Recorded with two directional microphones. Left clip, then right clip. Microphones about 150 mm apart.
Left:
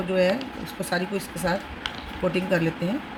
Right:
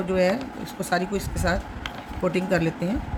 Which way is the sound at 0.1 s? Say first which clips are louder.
Even; 15° right (ahead or behind).